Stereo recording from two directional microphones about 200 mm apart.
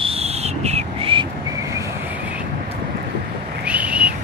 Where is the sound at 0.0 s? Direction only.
30° right (ahead or behind).